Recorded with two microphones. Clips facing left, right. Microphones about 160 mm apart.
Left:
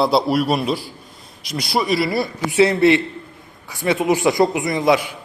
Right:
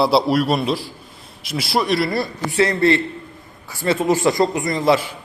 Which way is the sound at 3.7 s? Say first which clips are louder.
Even; 5° right (ahead or behind).